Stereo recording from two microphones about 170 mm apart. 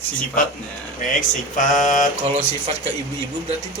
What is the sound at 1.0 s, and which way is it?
Speech, 50° left (ahead or behind).